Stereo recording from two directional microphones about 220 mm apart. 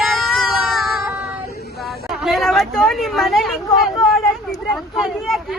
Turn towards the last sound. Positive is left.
turn(degrees=0)  # may be behind; listen again after turning